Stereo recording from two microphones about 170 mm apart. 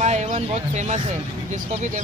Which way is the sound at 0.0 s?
40° right (ahead or behind).